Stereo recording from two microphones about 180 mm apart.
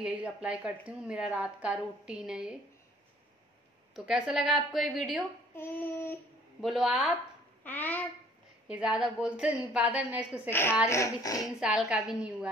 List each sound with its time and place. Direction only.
0.0 s a woman's voice: 5° right (ahead or behind)
3.9 s a woman's voice: 5° right (ahead or behind)
5.6 s child singing: 10° left (ahead or behind)
6.6 s a woman's voice: 5° right (ahead or behind)
7.6 s child singing: 10° left (ahead or behind)
8.6 s a woman's voice: 5° right (ahead or behind)
10.5 s child singing: 10° left (ahead or behind)
10.9 s speech: 20° left (ahead or behind)
11.6 s a woman's voice: 5° right (ahead or behind)